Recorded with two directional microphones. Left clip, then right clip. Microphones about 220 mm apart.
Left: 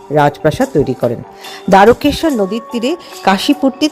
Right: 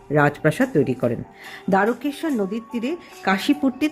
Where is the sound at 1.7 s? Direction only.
30° left (ahead or behind).